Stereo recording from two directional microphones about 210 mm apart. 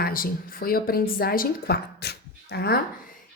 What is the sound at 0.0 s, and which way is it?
A woman's voice, 45° left (ahead or behind).